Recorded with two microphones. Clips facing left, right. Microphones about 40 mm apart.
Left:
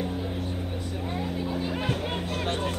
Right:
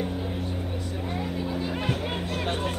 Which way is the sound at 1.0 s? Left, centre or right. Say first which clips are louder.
Even; centre.